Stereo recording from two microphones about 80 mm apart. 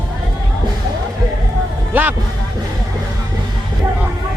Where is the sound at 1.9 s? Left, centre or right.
Right.